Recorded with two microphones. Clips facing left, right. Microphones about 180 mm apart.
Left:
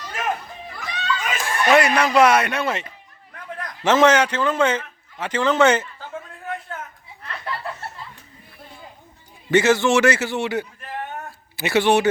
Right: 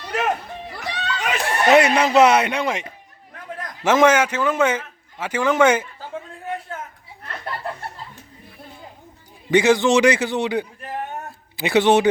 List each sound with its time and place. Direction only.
0.0 s chatter: 70° right (ahead or behind)
0.7 s a sound: 70° right (ahead or behind)
1.6 s speech: 20° right (ahead or behind)
3.8 s a man's voice: 10° right (ahead or behind)
7.2 s chuckle: 40° right (ahead or behind)
9.5 s a man's voice: 15° right (ahead or behind)